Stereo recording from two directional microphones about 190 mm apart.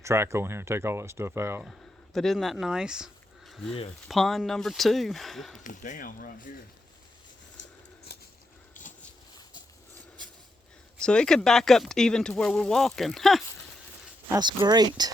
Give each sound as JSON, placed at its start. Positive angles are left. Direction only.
{"t": 0.0, "sound": "speech", "side_deg": -15}
{"t": 2.1, "sound": "speech", "side_deg": 0}
{"t": 5.6, "sound": "speech", "side_deg": 45}
{"t": 11.0, "sound": "speech", "side_deg": 5}
{"t": 14.3, "sound": "speech", "side_deg": -20}